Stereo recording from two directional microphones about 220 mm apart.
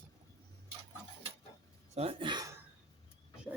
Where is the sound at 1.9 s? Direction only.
25° right (ahead or behind).